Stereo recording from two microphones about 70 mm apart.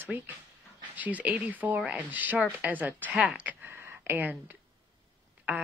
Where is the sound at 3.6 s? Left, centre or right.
Right.